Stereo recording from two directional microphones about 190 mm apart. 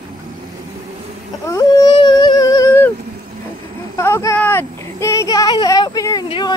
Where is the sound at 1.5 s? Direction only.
20° left (ahead or behind).